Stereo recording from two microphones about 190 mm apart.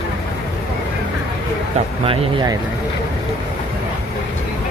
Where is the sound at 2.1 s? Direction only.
25° right (ahead or behind).